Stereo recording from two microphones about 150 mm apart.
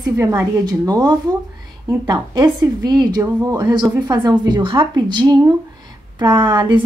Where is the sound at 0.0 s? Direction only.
20° right (ahead or behind).